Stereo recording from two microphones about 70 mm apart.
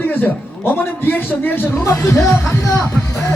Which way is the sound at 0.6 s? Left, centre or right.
Left.